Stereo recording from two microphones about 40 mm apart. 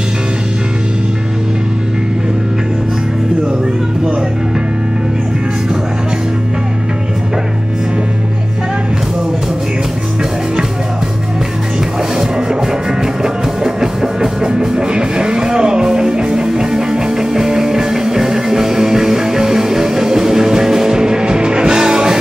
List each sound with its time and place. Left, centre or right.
12.2 s music: centre